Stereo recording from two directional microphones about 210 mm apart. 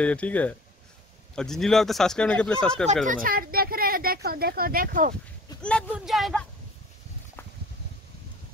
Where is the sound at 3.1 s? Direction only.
40° right (ahead or behind).